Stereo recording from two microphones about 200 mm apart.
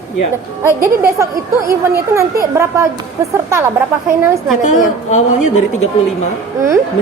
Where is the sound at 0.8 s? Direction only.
15° right (ahead or behind).